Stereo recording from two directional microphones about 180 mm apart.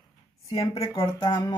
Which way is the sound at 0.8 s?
25° left (ahead or behind).